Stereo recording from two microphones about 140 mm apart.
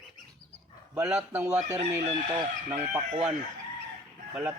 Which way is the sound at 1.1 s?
15° right (ahead or behind).